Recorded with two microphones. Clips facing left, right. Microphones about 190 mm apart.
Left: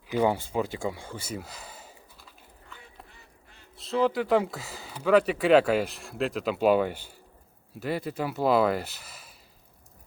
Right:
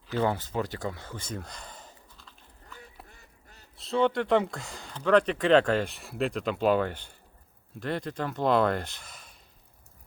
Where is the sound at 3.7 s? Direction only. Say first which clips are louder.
Even; centre (ahead or behind).